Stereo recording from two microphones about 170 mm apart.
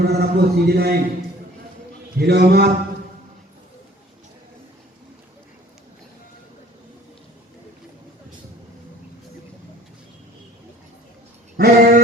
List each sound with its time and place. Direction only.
0.0 s a man's voice: 70° right (ahead or behind)
2.1 s a man's voice: 70° right (ahead or behind)
11.5 s a sound: 65° right (ahead or behind)